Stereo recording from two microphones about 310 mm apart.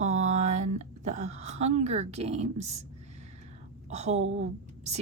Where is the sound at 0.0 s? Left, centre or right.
Right.